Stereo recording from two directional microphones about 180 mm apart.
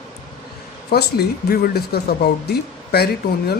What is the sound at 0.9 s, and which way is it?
Speech, 65° left (ahead or behind).